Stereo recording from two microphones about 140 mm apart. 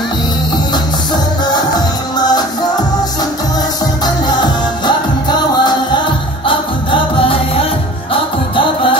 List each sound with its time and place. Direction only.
1.1 s music: 30° left (ahead or behind)
4.0 s music: 30° left (ahead or behind)